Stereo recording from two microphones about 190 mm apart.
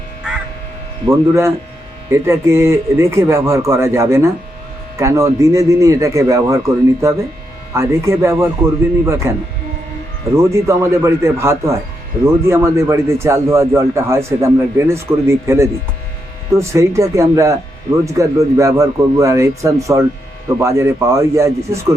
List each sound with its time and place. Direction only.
1.0 s a man's voice: 15° right (ahead or behind)